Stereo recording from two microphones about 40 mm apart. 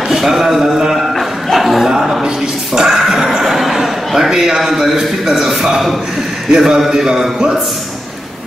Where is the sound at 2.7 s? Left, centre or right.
Centre.